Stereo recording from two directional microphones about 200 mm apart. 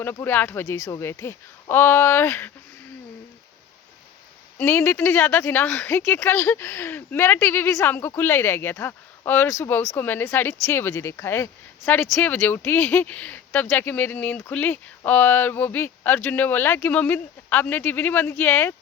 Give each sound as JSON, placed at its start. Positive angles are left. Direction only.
{"t": 0.0, "sound": "speech", "side_deg": 10}
{"t": 4.5, "sound": "speech", "side_deg": 10}